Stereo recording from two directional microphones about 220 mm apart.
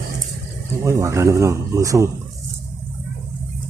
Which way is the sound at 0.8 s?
15° right (ahead or behind).